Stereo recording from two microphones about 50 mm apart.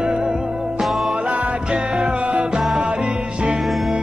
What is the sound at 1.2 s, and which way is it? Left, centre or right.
Music, right.